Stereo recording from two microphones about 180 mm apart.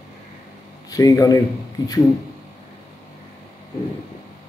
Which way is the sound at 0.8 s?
20° left (ahead or behind).